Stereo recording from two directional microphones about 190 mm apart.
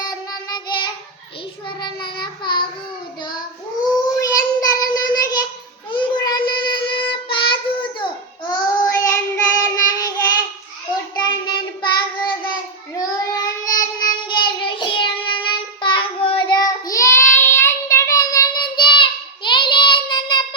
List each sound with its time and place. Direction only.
0.0 s child singing: 20° left (ahead or behind)
4.2 s child singing: 20° left (ahead or behind)